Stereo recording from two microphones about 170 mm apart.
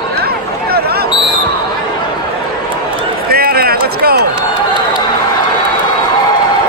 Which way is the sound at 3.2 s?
65° right (ahead or behind).